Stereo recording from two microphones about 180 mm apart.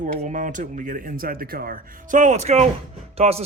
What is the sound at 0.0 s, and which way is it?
Speech, 45° right (ahead or behind).